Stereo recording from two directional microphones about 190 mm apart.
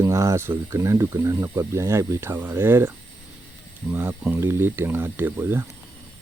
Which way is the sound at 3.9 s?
10° right (ahead or behind).